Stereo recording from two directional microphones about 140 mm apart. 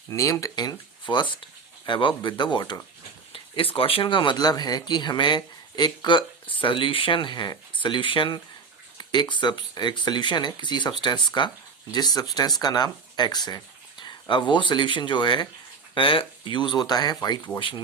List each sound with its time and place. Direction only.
0.1 s speech: 20° left (ahead or behind)
3.3 s a sound: 40° left (ahead or behind)
3.8 s speech: 40° left (ahead or behind)